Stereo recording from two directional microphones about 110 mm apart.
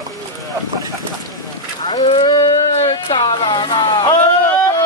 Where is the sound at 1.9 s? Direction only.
50° left (ahead or behind).